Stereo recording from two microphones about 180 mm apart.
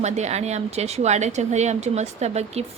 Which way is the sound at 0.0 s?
40° right (ahead or behind).